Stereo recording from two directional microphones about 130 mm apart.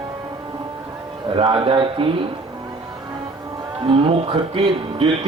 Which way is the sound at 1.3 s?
40° right (ahead or behind).